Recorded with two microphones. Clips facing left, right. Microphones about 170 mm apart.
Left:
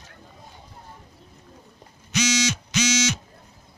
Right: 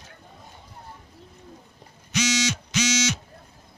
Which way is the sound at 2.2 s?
90° left.